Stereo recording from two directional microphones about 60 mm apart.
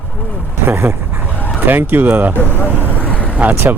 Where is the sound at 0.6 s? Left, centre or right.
Right.